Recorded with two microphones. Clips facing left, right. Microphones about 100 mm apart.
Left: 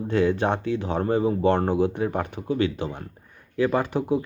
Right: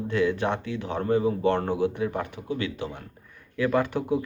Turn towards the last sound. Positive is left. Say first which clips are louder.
# left 1 dB
turn(degrees=25)  # may be behind; listen again after turning